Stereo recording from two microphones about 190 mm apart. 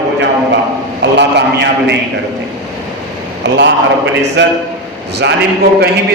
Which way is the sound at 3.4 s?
70° right (ahead or behind).